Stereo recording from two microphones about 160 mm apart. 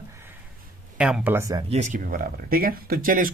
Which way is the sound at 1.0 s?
5° right (ahead or behind).